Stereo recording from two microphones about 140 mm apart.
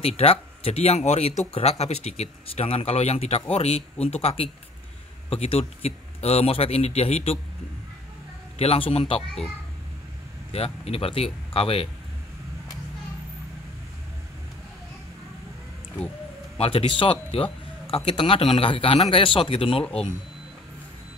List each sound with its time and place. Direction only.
0.0 s speech: 45° left (ahead or behind)
8.5 s a man's voice: 45° left (ahead or behind)
9.2 s a child's voice: 5° left (ahead or behind)
10.5 s speech: 45° left (ahead or behind)
16.5 s a man's voice: 40° left (ahead or behind)